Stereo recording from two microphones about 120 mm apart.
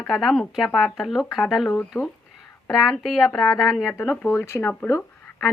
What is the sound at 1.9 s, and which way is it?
Speech, 20° left (ahead or behind).